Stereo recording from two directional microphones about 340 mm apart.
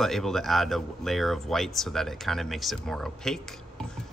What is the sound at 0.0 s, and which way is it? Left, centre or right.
Speech, centre.